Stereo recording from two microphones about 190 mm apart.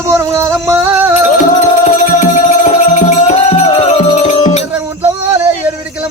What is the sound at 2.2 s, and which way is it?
Music, 40° left (ahead or behind).